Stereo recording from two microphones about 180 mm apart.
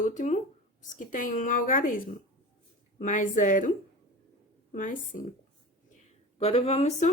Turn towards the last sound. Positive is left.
turn(degrees=35)  # may be behind; listen again after turning